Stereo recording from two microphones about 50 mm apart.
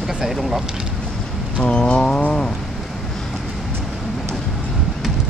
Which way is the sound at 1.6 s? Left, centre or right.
Centre.